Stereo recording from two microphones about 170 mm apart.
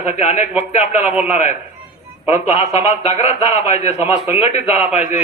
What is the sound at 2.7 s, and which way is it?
A man's voice, 35° left (ahead or behind).